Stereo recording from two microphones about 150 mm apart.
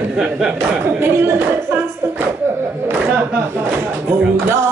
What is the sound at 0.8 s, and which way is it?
A woman's voice, 15° right (ahead or behind).